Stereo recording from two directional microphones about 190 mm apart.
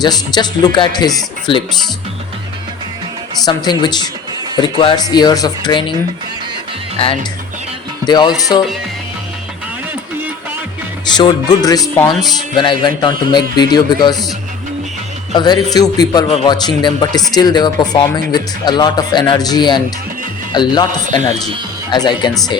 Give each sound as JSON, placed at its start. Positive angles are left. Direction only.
{"t": 0.0, "sound": "speech", "side_deg": 20}
{"t": 3.4, "sound": "speech", "side_deg": 20}
{"t": 8.0, "sound": "speech", "side_deg": 20}
{"t": 11.1, "sound": "speech", "side_deg": 20}
{"t": 15.3, "sound": "speech", "side_deg": 25}